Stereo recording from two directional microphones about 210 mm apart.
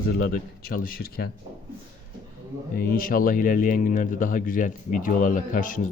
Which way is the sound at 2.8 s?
40° left (ahead or behind).